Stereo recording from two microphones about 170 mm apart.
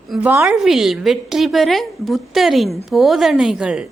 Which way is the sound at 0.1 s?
10° right (ahead or behind).